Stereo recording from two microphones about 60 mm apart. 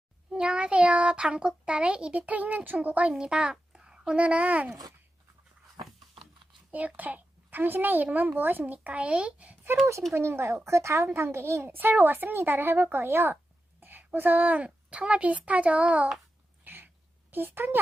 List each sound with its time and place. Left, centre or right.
0.3 s a child's voice: centre
6.7 s a child's voice: right
10.2 s a child's voice: right
11.7 s a woman's voice: right
16.6 s a sound: right
17.3 s speech: right